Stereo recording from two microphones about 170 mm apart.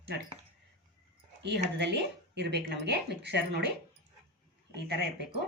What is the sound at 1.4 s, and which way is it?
Speech, 90° right.